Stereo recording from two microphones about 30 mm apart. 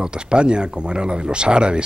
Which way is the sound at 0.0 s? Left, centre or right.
Right.